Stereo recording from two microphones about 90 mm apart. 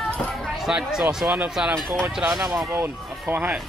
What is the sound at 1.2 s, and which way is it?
Speech, 20° right (ahead or behind).